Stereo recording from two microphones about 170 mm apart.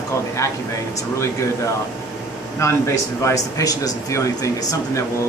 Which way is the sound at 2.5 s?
15° left (ahead or behind).